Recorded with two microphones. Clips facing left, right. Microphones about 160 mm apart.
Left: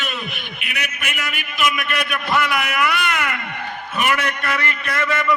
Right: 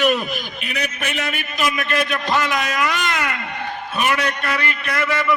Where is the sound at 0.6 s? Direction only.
35° right (ahead or behind); by 5.1 s 10° right (ahead or behind).